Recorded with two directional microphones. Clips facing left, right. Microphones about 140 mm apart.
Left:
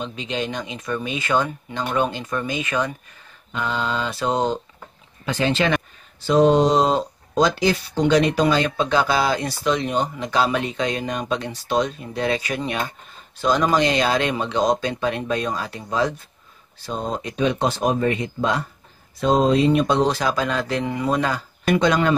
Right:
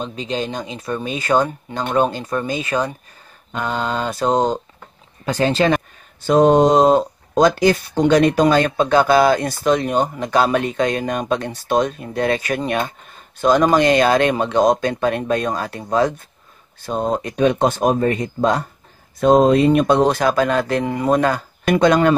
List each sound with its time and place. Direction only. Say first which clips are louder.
0.0 s speech: right 3 dB; 40° right (ahead or behind)
3.5 s speech: right 2 dB; 45° right (ahead or behind)
6.2 s speech: right 3 dB; 50° right (ahead or behind)